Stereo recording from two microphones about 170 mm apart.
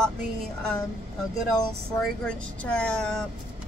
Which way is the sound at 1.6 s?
5° left (ahead or behind).